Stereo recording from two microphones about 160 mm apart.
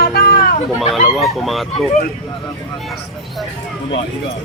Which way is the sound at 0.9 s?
Centre (ahead or behind).